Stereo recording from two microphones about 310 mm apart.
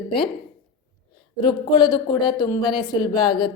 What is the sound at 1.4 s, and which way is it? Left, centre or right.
A woman's voice, centre.